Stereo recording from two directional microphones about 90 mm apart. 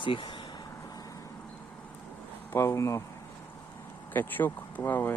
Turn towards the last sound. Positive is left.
turn(degrees=25)  # may be behind; listen again after turning